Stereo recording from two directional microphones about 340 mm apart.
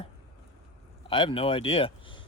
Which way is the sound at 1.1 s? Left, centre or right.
Centre.